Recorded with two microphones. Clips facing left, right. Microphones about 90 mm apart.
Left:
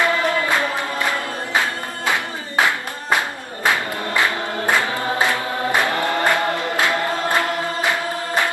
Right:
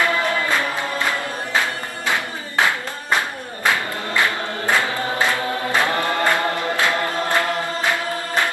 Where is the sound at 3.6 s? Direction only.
20° left (ahead or behind).